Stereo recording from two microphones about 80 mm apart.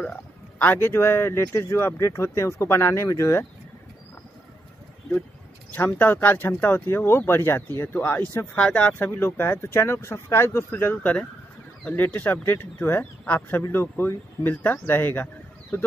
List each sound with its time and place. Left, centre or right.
0.0 s speech: centre; by 3.4 s left
5.7 s speech: left
8.5 s speech: centre